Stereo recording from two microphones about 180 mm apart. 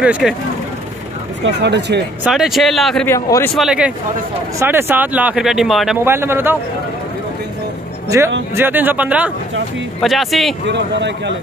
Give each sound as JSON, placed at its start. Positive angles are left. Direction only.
{"t": 0.0, "sound": "a man's voice", "side_deg": -5}
{"t": 1.4, "sound": "speech", "side_deg": -70}
{"t": 2.2, "sound": "a man's voice", "side_deg": 0}
{"t": 3.1, "sound": "a man's voice", "side_deg": 15}
{"t": 3.5, "sound": "a man's voice", "side_deg": -5}
{"t": 6.0, "sound": "speech", "side_deg": -15}
{"t": 8.5, "sound": "a man's voice", "side_deg": -10}
{"t": 10.6, "sound": "speech", "side_deg": -75}